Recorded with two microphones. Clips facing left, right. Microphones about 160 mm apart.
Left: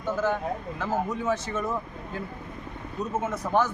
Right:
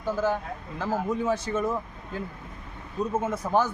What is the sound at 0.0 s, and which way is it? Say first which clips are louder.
Speech: even; 10° right (ahead or behind).